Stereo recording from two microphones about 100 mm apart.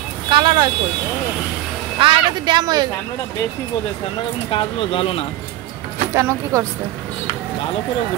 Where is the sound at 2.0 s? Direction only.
60° right (ahead or behind); by 2.9 s 45° right (ahead or behind).